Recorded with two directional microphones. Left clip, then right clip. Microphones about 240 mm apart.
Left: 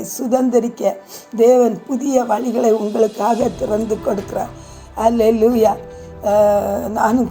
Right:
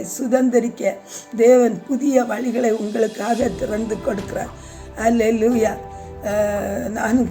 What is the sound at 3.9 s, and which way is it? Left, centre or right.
Speech, centre.